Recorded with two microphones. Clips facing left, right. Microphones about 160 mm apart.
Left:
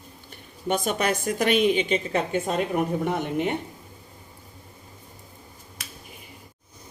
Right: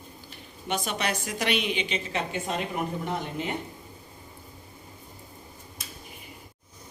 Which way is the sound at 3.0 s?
60° left (ahead or behind).